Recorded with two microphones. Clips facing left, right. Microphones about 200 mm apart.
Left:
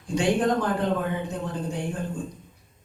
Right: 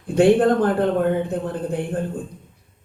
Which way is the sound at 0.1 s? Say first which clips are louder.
Right 8 dB; 55° right (ahead or behind).